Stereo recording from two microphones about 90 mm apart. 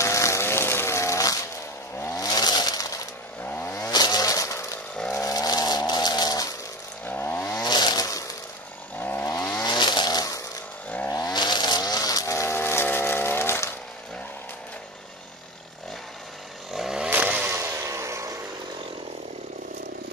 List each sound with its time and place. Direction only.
0.0 s a sound: 35° left (ahead or behind)
2.0 s chainsaw: 35° left (ahead or behind)
3.4 s chainsaw: 20° left (ahead or behind)
3.9 s a sound: 50° left (ahead or behind)
7.1 s chainsaw: 20° left (ahead or behind)
7.6 s chainsaw: 50° left (ahead or behind)
9.0 s chainsaw: 25° left (ahead or behind)
9.7 s a sound: 55° left (ahead or behind)
11.1 s chainsaw: 40° left (ahead or behind)
12.5 s music: 25° left (ahead or behind)
16.7 s chainsaw: 5° right (ahead or behind)
17.1 s chainsaw: 15° right (ahead or behind)
17.6 s vehicle: 30° right (ahead or behind)